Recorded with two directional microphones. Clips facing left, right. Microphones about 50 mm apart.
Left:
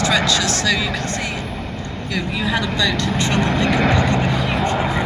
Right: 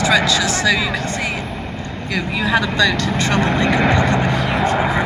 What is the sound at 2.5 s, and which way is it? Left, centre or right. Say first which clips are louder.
Speech: right 5 dB; right.